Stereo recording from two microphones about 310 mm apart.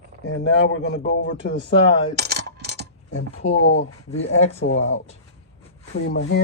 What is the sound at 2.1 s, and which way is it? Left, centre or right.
Coin, right.